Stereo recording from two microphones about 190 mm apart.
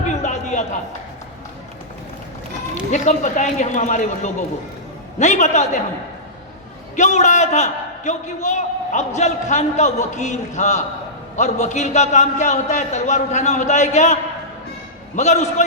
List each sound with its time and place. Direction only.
0.1 s a sound: 40° left (ahead or behind)
2.9 s a man's voice: 40° left (ahead or behind)
6.9 s a man's voice: 40° left (ahead or behind)